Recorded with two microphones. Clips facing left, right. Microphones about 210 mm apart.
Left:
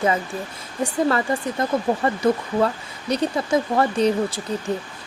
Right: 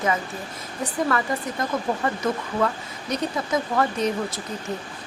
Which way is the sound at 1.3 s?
25° left (ahead or behind).